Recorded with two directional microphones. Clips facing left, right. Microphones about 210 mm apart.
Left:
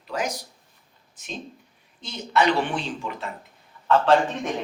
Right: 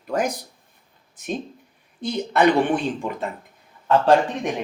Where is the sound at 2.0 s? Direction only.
55° right (ahead or behind).